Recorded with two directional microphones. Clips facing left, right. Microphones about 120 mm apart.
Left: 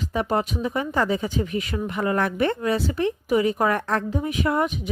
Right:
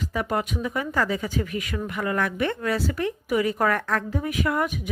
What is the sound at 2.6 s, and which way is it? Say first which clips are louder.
A woman's voice: left 3 dB; 25° left (ahead or behind).